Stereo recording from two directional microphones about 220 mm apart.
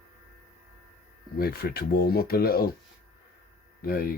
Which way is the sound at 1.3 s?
45° left (ahead or behind).